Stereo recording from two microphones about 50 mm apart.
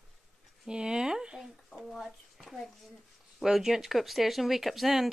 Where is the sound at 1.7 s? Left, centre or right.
Centre.